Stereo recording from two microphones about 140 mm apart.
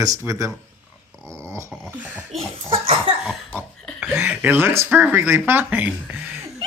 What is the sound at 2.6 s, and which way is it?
Cough, 40° right (ahead or behind).